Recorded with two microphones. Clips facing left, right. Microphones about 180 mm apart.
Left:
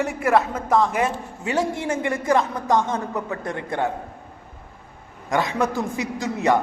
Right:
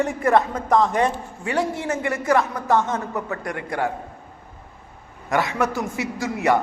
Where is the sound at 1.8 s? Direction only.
25° left (ahead or behind).